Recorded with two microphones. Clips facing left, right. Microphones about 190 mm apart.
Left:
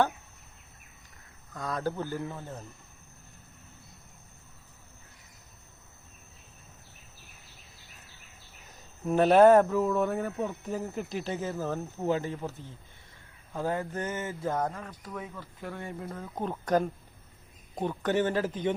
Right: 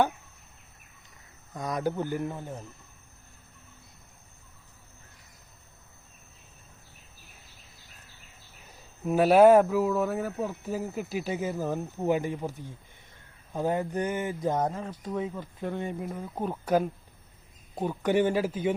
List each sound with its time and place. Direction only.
1.5 s speech: 15° right (ahead or behind)
8.6 s speech: 5° right (ahead or behind)